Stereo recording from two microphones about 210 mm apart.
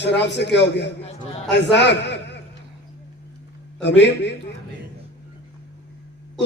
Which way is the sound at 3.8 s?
55° left (ahead or behind).